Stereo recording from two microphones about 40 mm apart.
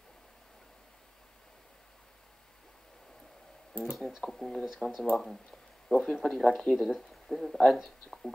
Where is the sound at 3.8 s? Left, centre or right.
Right.